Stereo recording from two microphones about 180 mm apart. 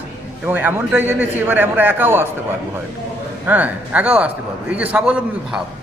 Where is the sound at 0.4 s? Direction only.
10° right (ahead or behind).